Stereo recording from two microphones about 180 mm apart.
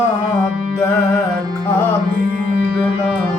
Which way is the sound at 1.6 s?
10° left (ahead or behind).